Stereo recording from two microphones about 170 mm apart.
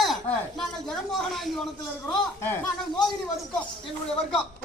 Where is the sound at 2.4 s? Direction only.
15° left (ahead or behind).